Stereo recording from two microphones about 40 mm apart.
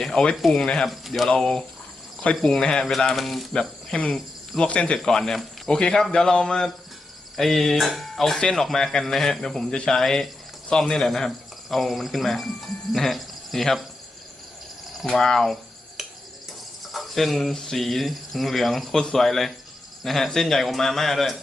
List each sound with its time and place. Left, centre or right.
0.0 s a sound: centre
0.5 s speech: centre
0.9 s speech: centre
1.3 s a man's voice: centre
3.2 s speech: centre
3.9 s speech: left
5.0 s a man's voice: centre
8.4 s a man's voice: centre
15.0 s a man's voice: centre
16.0 s cricket: centre
19.1 s speech: centre